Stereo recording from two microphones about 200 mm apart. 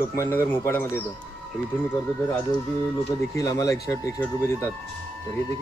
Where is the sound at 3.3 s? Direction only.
15° left (ahead or behind).